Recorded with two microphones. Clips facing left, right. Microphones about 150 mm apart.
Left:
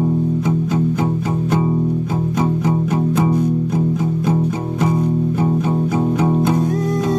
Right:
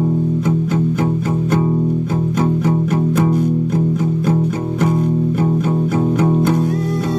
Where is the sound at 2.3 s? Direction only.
20° left (ahead or behind).